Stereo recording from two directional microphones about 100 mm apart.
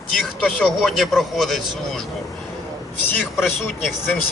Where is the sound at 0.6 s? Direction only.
5° left (ahead or behind).